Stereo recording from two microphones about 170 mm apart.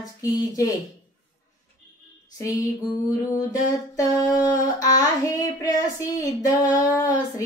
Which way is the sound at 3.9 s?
20° left (ahead or behind).